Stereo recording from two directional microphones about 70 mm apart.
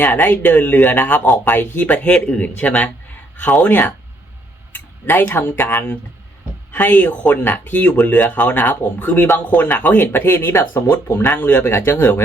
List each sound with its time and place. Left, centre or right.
0.0 s speech: left
3.7 s speech: left